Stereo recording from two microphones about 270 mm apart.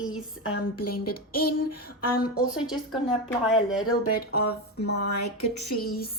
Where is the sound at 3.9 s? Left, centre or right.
Left.